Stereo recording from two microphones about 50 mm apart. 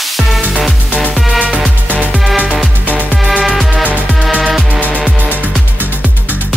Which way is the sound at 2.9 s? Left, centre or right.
Right.